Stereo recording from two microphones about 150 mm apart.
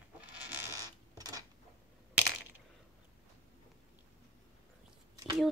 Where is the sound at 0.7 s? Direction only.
20° right (ahead or behind).